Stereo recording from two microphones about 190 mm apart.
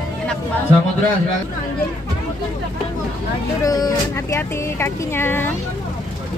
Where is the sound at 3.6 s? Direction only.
20° left (ahead or behind).